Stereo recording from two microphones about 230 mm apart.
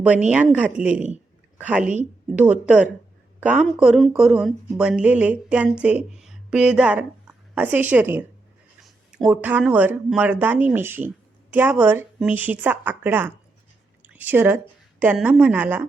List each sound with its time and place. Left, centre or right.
0.3 s a woman's voice: centre